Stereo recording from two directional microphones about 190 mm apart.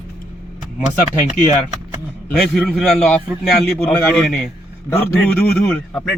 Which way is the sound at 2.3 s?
Centre (ahead or behind).